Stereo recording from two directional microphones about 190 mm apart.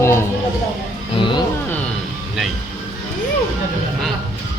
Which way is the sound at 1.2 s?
25° left (ahead or behind).